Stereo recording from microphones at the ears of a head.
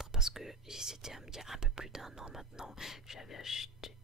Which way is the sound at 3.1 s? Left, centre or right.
Left.